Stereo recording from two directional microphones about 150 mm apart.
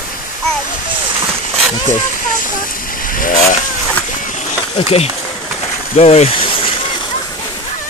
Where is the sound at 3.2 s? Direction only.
65° left (ahead or behind).